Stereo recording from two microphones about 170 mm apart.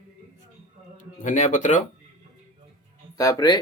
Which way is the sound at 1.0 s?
45° left (ahead or behind).